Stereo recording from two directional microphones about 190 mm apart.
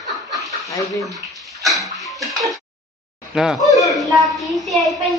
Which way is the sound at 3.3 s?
Centre (ahead or behind).